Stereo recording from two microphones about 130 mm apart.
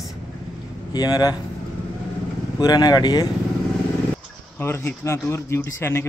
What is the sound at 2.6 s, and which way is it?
Speech, 30° left (ahead or behind).